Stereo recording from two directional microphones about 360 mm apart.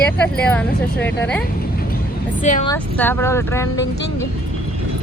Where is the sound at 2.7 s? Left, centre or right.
Centre.